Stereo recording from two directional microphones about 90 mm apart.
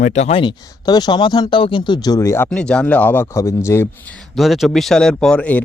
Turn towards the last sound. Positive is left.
turn(degrees=15)  # may be behind; listen again after turning